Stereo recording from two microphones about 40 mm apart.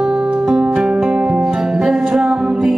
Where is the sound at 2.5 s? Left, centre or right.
Centre.